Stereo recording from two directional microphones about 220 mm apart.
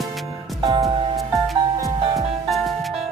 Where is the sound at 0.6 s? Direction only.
15° right (ahead or behind).